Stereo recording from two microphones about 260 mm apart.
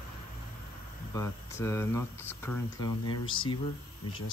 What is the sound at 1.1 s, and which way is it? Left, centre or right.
Speech, centre.